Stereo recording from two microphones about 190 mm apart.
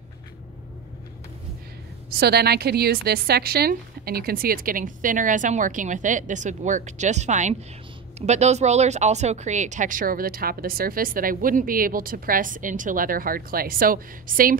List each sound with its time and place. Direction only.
2.0 s speech: 55° right (ahead or behind)